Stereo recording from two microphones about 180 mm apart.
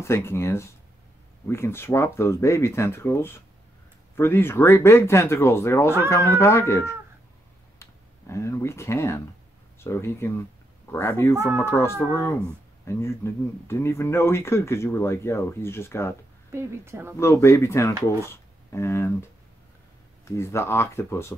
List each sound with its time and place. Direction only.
0.0 s speech: 15° left (ahead or behind)
16.5 s a woman's voice: 15° right (ahead or behind)
17.2 s speech: 15° left (ahead or behind)
20.2 s speech: 15° left (ahead or behind)